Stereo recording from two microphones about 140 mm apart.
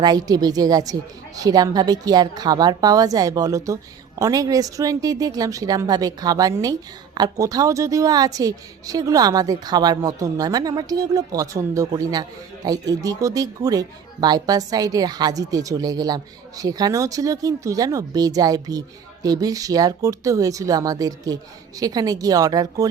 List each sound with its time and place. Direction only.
0.0 s speech: 25° right (ahead or behind)